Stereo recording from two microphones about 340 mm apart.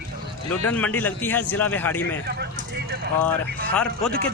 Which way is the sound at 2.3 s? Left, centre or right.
Right.